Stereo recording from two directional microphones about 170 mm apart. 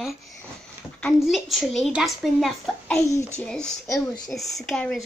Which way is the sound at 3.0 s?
20° left (ahead or behind).